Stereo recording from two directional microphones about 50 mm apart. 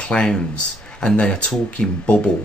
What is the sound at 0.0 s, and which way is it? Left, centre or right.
Speech, centre.